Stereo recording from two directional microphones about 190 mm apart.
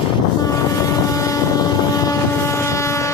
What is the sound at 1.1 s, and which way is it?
Vehicle, 15° left (ahead or behind).